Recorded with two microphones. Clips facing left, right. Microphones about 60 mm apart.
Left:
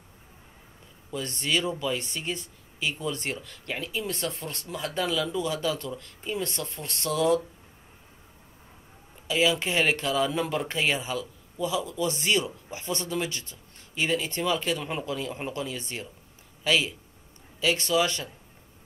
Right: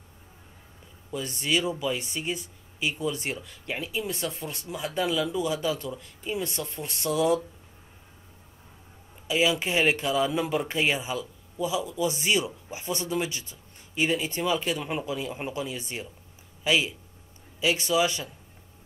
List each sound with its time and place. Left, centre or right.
1.1 s speech: centre
9.3 s speech: centre